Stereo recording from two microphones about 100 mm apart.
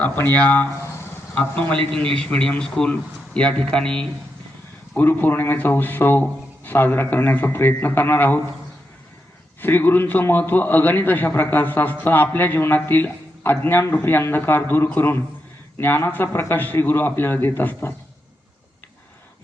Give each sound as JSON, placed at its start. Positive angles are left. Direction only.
{"t": 0.0, "sound": "a man's voice", "side_deg": 15}
{"t": 4.9, "sound": "a man's voice", "side_deg": 20}
{"t": 9.6, "sound": "a man's voice", "side_deg": 20}